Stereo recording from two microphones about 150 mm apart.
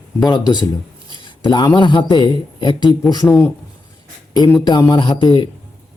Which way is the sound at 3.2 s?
20° left (ahead or behind).